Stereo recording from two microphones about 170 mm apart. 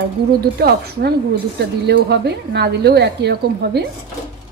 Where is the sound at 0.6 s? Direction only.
65° right (ahead or behind).